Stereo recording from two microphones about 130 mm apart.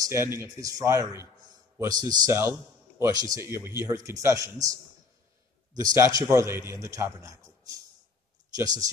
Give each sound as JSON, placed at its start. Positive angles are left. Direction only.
{"t": 0.0, "sound": "a man's voice", "side_deg": -20}
{"t": 5.8, "sound": "a man's voice", "side_deg": -25}